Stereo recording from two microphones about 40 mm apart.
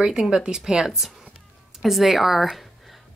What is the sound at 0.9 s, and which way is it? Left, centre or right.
Speech, centre.